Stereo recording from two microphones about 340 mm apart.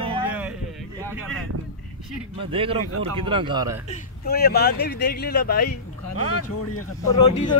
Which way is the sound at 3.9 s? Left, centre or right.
Left.